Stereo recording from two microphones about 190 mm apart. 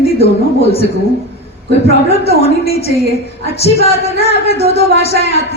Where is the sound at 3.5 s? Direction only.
35° left (ahead or behind).